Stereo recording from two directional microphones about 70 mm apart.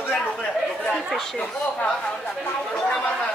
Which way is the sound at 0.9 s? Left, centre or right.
Centre.